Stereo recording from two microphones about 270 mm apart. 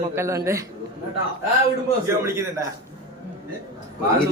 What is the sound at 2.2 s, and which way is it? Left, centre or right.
Speech, centre.